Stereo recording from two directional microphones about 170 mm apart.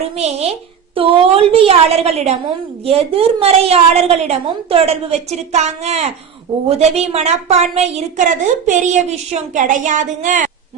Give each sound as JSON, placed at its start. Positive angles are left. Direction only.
{"t": 0.0, "sound": "a woman's voice", "side_deg": -40}